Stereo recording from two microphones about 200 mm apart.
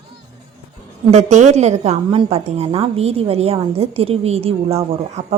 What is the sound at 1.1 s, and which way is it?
A woman's voice, 35° right (ahead or behind).